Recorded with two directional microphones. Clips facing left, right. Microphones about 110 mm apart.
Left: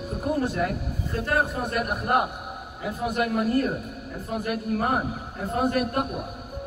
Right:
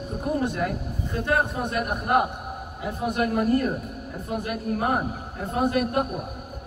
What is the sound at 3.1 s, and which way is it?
Speech, 35° right (ahead or behind).